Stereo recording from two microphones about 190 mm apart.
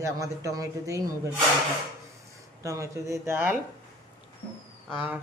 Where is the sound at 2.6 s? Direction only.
15° right (ahead or behind).